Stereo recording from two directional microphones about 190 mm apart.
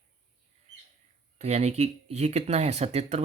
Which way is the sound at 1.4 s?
35° right (ahead or behind).